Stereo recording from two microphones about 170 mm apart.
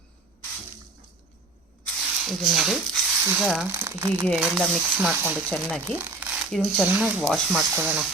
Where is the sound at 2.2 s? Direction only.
Centre (ahead or behind).